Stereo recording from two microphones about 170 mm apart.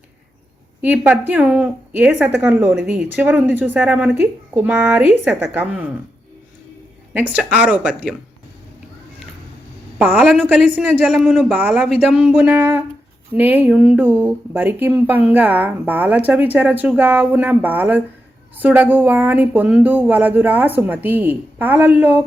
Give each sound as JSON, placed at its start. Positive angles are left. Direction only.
{"t": 0.8, "sound": "speech", "side_deg": -10}
{"t": 7.1, "sound": "speech", "side_deg": -10}
{"t": 10.1, "sound": "speech", "side_deg": -5}